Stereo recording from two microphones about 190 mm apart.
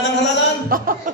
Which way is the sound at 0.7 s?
50° right (ahead or behind).